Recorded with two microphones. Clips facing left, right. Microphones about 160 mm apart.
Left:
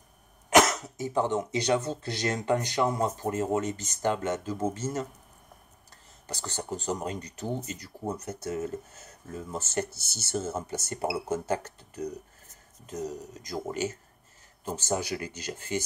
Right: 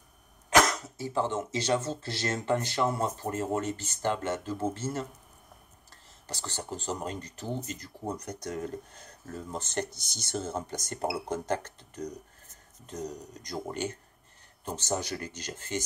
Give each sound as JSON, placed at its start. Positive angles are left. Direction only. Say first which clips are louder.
{"t": 0.5, "sound": "speech", "louder": "left 3 dB", "side_deg": 20}
{"t": 6.2, "sound": "speech", "louder": "left 2 dB", "side_deg": 15}